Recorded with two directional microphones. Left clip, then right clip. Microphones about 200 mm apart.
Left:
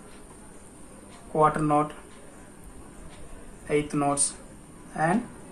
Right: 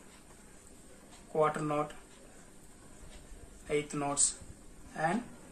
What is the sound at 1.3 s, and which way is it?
Speech, 5° right (ahead or behind).